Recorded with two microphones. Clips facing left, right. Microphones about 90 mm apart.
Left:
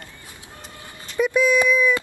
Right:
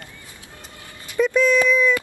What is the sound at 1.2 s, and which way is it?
Speech, 10° left (ahead or behind).